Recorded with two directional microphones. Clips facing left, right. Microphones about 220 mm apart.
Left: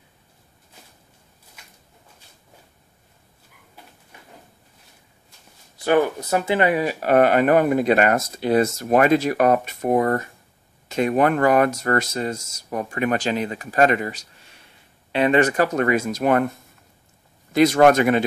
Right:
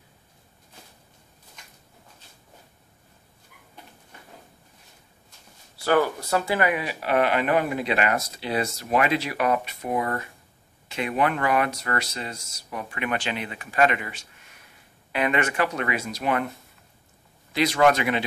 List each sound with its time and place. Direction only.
5.8 s speech: 20° left (ahead or behind)
6.7 s speech: 40° left (ahead or behind)
17.5 s speech: 45° left (ahead or behind)